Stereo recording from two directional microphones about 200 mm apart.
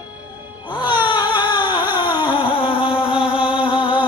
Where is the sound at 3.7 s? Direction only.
25° left (ahead or behind).